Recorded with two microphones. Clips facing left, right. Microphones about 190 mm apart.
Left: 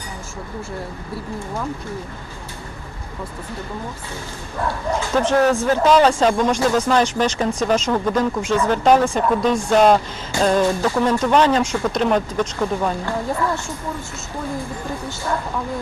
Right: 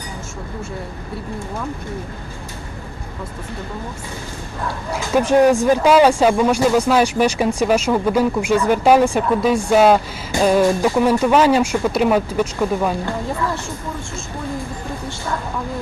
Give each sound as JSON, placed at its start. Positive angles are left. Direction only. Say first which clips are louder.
{"t": 4.9, "sound": "speech", "louder": "right 3 dB", "side_deg": -10}